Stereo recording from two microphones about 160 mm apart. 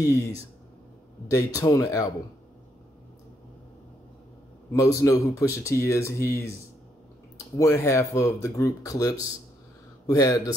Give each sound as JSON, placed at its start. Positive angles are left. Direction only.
{"t": 1.3, "sound": "speech", "side_deg": 20}
{"t": 4.7, "sound": "speech", "side_deg": 20}